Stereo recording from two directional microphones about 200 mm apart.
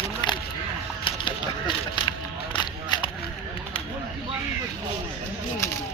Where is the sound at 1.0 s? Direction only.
25° left (ahead or behind).